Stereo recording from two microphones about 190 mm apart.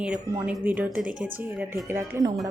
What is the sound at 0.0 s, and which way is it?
Speech, 5° right (ahead or behind).